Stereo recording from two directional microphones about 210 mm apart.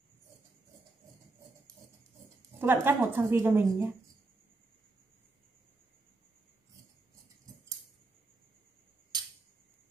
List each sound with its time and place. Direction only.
2.6 s a woman's voice: 10° right (ahead or behind)